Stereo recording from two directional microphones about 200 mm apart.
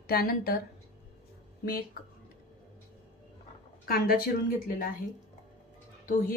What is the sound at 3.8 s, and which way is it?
Speech, 50° left (ahead or behind).